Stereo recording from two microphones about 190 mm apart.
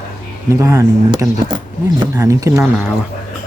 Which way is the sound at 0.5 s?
15° right (ahead or behind).